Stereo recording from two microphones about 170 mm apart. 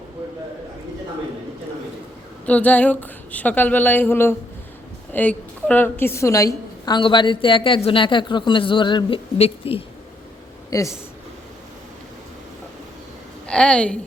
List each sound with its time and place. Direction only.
2.5 s a woman's voice: 10° left (ahead or behind); by 9.8 s 35° left (ahead or behind)
10.7 s speech: 20° left (ahead or behind)
13.5 s a woman's voice: 5° left (ahead or behind)